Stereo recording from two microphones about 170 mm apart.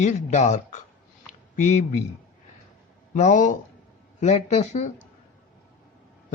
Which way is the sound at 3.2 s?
45° left (ahead or behind).